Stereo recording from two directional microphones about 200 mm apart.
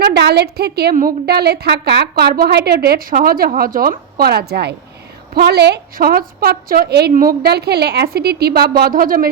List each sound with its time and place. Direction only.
0.0 s a woman's voice: 55° right (ahead or behind)